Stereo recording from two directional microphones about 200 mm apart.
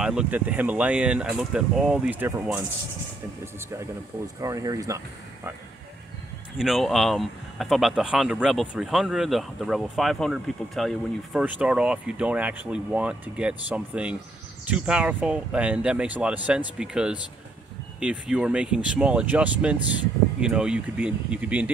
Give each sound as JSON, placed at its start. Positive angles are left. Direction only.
{"t": 0.0, "sound": "speech", "side_deg": -5}
{"t": 4.4, "sound": "speech", "side_deg": -15}
{"t": 6.6, "sound": "speech", "side_deg": 0}